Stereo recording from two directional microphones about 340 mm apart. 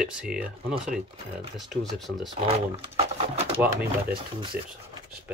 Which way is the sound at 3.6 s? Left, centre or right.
Centre.